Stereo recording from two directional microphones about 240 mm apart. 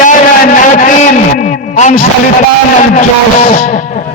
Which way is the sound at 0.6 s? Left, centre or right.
Left.